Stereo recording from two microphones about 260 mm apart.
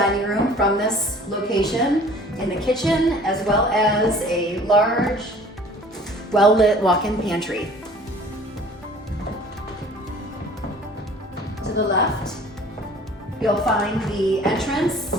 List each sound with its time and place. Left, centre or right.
0.0 s a sound: centre
1.5 s a woman's voice: centre
6.6 s a woman's voice: centre
11.6 s music: left
13.4 s a woman's voice: centre